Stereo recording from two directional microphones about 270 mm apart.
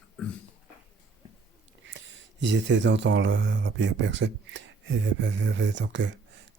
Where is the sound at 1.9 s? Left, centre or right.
Right.